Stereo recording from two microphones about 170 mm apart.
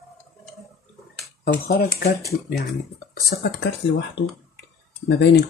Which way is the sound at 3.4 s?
90° left.